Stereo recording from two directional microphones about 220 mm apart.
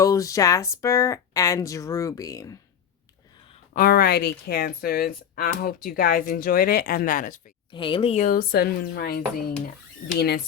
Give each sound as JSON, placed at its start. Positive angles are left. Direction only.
{"t": 0.0, "sound": "speech", "side_deg": 15}
{"t": 3.8, "sound": "speech", "side_deg": 45}
{"t": 7.7, "sound": "speech", "side_deg": 20}